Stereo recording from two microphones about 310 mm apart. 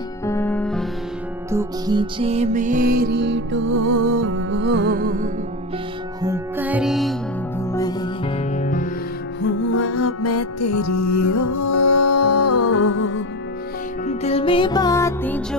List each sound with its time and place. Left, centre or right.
0.2 s music: centre
1.5 s music: centre; by 5.3 s right
6.2 s music: centre
7.7 s music: centre
9.4 s music: left
14.0 s music: centre